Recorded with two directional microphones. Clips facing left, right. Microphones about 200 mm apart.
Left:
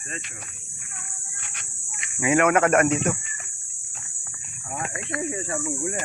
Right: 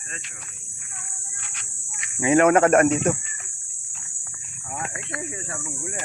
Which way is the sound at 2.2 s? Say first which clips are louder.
Right 3 dB; 30° right (ahead or behind).